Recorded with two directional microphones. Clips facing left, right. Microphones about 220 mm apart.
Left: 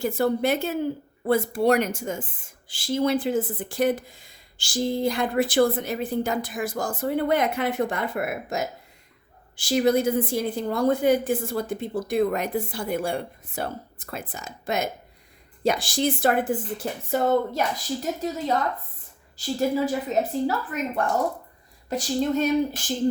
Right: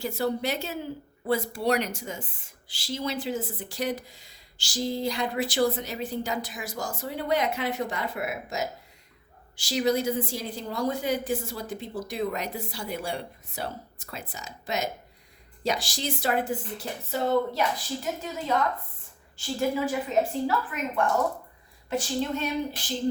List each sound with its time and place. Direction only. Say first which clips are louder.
0.0 s speech: left 5 dB; 50° left (ahead or behind)